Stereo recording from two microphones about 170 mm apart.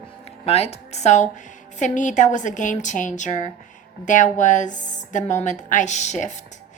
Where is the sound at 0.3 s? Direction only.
35° left (ahead or behind).